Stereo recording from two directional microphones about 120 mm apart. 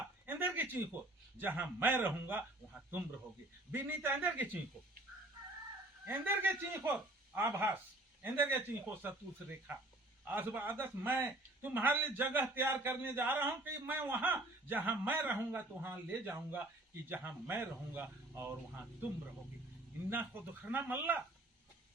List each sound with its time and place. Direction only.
0.3 s a sound: 15° right (ahead or behind)
1.4 s a man's voice: 15° right (ahead or behind)
6.1 s a man's voice: 15° right (ahead or behind)
10.2 s a man's voice: 15° right (ahead or behind)
20.1 s a man's voice: 15° right (ahead or behind)